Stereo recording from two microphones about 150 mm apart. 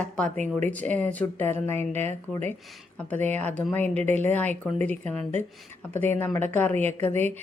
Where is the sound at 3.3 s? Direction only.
10° left (ahead or behind).